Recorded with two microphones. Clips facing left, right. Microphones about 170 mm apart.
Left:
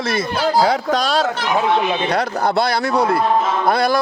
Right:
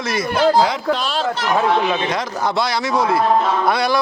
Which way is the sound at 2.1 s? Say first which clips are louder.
Left 3 dB; 60° left (ahead or behind).